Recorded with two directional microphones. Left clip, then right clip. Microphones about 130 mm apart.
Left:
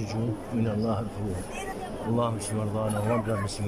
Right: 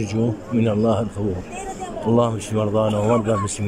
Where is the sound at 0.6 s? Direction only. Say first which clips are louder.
Right 11 dB; 20° right (ahead or behind).